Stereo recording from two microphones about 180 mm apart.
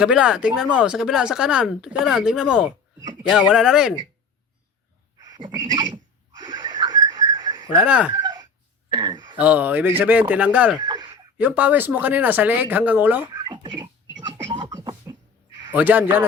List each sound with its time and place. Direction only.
0.0 s speech: 5° right (ahead or behind)
5.3 s a sound: 20° right (ahead or behind)
6.4 s goat: 25° right (ahead or behind)
7.7 s speech: 5° right (ahead or behind)
8.1 s a sound: 25° right (ahead or behind)
8.9 s speech: 25° right (ahead or behind)
9.4 s speech: 10° right (ahead or behind)
10.8 s a sound: 25° right (ahead or behind)
11.3 s speech: 10° right (ahead or behind)
13.3 s a sound: 25° right (ahead or behind)
14.5 s beatboxing: 25° right (ahead or behind)
15.7 s speech: 10° right (ahead or behind)